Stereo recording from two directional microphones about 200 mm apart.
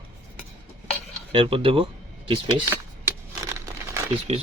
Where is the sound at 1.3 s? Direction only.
25° right (ahead or behind).